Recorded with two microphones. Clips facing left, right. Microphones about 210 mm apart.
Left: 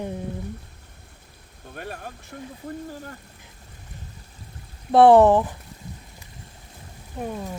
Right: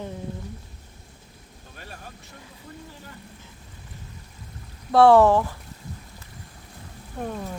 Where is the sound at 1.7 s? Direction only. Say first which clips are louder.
Left 8 dB; 55° left (ahead or behind).